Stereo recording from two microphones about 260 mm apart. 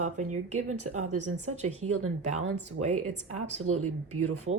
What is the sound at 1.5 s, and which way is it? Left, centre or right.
Speech, right.